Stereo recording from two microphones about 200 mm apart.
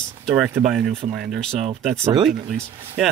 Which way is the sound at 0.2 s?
5° right (ahead or behind).